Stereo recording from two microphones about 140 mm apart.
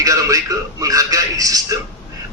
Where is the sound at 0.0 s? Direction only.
25° right (ahead or behind).